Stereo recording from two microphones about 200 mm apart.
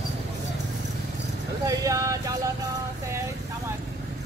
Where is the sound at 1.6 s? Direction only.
15° right (ahead or behind).